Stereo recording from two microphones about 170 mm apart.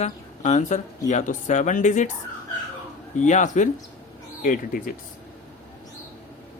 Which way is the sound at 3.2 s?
45° left (ahead or behind).